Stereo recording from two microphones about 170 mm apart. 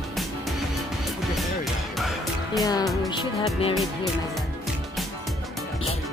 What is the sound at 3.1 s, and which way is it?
Music, 30° left (ahead or behind).